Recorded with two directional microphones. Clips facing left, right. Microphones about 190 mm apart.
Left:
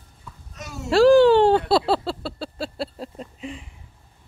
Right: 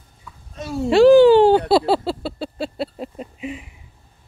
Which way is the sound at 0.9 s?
Centre (ahead or behind).